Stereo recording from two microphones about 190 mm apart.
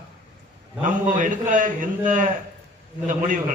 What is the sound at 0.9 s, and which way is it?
A man's voice, 45° right (ahead or behind).